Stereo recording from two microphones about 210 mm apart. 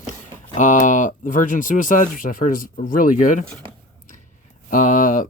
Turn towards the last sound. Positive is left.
turn(degrees=40)  # may be behind; listen again after turning